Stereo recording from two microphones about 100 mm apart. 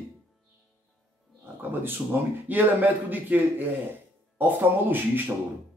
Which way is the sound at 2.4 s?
15° right (ahead or behind).